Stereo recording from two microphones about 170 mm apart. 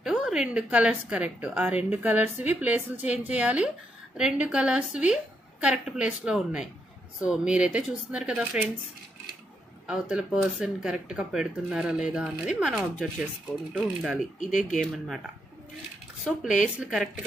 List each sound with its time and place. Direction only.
0.0 s a woman's voice: 5° right (ahead or behind)
9.8 s speech: 5° right (ahead or behind)
14.4 s speech: 50° left (ahead or behind)
16.3 s speech: 5° left (ahead or behind)